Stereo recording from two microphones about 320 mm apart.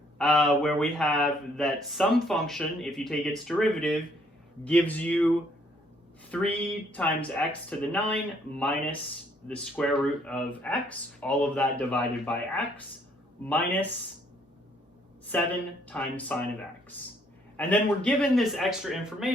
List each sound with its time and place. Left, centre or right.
0.2 s speech: centre
6.3 s speech: centre
15.3 s speech: centre
17.6 s speech: centre